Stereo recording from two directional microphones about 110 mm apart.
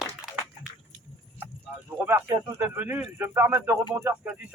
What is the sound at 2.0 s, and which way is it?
A man's voice, 20° right (ahead or behind).